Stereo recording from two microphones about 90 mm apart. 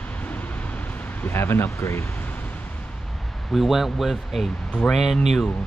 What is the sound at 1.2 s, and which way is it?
Speech, 25° left (ahead or behind).